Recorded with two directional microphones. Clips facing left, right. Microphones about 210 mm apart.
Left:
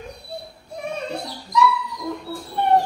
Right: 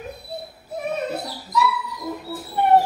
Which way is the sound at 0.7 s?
5° right (ahead or behind).